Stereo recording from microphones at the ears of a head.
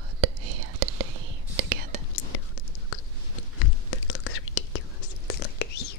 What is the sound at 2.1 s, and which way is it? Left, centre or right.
Whispering, left.